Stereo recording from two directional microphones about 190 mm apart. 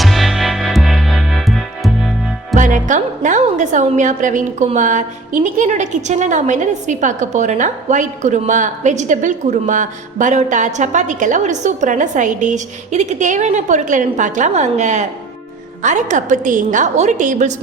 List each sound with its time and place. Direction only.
0.0 s music: centre (ahead or behind)
2.6 s a woman's voice: 40° right (ahead or behind)